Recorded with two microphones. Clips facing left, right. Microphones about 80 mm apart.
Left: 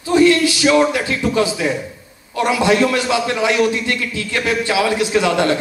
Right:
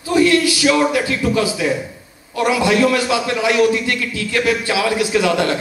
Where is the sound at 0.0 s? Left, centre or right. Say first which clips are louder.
Left 1 dB; left.